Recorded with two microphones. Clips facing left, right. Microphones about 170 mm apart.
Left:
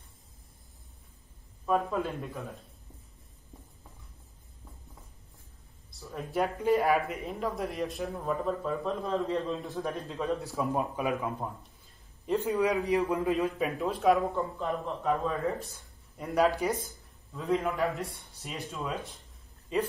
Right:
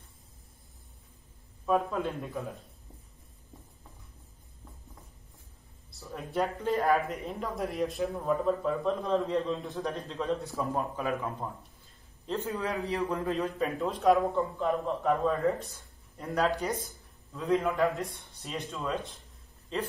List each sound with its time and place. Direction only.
1.7 s a man's voice: centre (ahead or behind)
6.1 s a man's voice: 5° left (ahead or behind)
10.6 s a man's voice: 15° left (ahead or behind)
12.3 s a man's voice: 15° left (ahead or behind)